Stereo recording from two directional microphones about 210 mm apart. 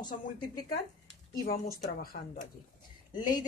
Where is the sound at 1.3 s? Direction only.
45° left (ahead or behind).